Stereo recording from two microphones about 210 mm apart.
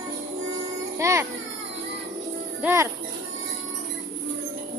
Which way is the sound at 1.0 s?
15° right (ahead or behind).